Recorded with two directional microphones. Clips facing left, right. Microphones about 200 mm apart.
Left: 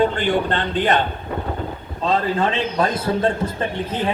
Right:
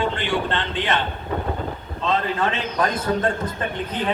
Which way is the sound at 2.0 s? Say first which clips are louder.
Left 3 dB; 35° left (ahead or behind).